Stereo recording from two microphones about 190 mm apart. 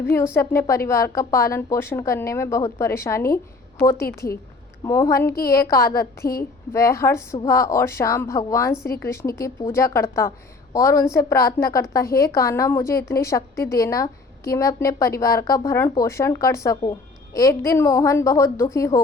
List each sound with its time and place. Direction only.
0.3 s a woman's voice: 15° left (ahead or behind)